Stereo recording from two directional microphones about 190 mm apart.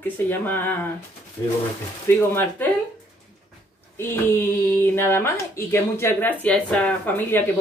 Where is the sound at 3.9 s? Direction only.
15° left (ahead or behind).